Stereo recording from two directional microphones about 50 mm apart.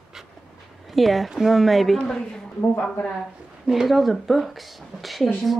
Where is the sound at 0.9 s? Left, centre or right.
Centre.